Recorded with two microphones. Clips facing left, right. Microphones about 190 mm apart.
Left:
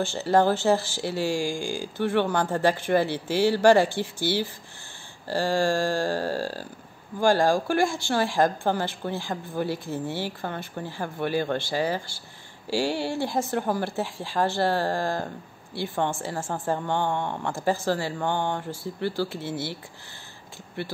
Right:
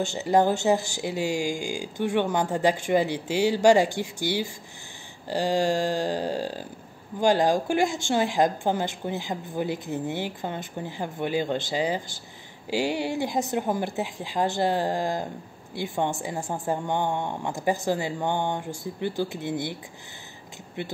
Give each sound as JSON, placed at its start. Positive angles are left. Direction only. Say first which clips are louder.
{"t": 0.0, "sound": "a woman's voice", "louder": "even", "side_deg": -15}